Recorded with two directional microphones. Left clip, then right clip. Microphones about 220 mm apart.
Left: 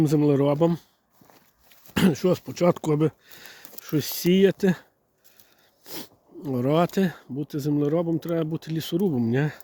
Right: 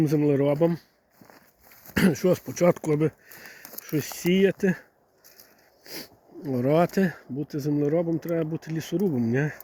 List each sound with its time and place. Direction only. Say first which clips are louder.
0.0 s speech: left 1 dB; 20° left (ahead or behind)
1.9 s speech: even; 15° left (ahead or behind)
2.7 s speech: left 1 dB; 20° left (ahead or behind)